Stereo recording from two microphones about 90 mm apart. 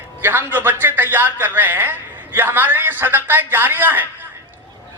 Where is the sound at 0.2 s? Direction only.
25° right (ahead or behind).